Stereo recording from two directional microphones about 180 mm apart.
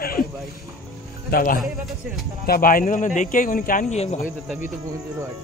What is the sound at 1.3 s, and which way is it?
Speech, 50° left (ahead or behind).